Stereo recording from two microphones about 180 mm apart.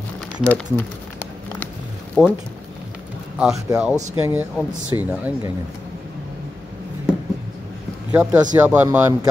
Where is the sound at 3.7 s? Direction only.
15° right (ahead or behind).